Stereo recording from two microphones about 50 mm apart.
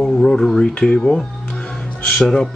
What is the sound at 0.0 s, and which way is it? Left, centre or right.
Music, centre.